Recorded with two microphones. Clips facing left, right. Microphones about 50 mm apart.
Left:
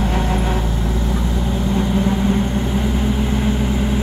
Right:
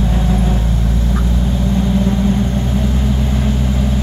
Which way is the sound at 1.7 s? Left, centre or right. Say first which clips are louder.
Right 2 dB; centre.